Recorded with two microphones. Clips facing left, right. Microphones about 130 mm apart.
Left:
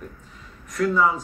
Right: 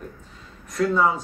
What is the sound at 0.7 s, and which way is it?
Speech, 30° right (ahead or behind).